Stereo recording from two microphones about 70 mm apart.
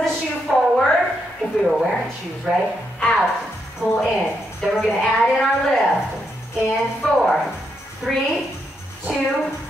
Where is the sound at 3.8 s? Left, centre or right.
Centre.